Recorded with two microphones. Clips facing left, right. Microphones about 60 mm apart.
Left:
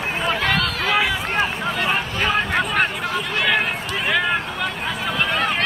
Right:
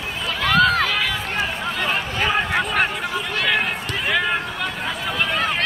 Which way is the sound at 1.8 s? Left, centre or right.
Centre.